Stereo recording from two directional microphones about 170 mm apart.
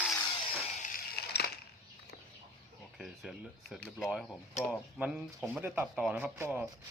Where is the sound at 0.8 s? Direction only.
50° left (ahead or behind).